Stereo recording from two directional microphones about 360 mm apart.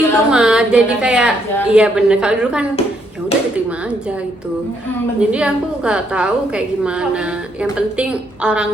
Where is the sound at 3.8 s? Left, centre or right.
Centre.